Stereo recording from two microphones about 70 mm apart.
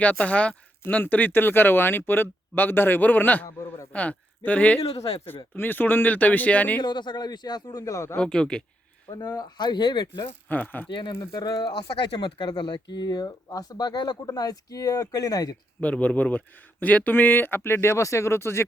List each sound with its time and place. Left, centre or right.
0.0 s speech: centre
6.8 s speech: left
8.2 s speech: centre
9.2 s speech: left
9.6 s speech: left
10.5 s speech: left
11.2 s speech: left
12.1 s speech: left
15.8 s speech: centre; by 18.6 s left